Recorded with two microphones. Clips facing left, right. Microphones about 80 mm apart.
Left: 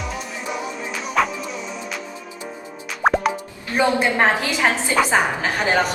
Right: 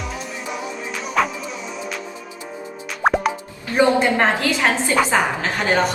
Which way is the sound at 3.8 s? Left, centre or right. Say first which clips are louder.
Right 2 dB; centre.